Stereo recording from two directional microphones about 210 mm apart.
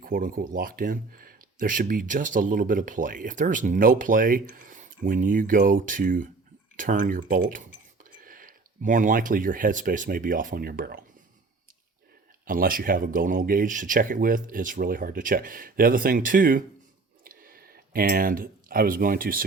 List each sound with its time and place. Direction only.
0.0 s speech: 40° right (ahead or behind)
12.5 s speech: 40° right (ahead or behind)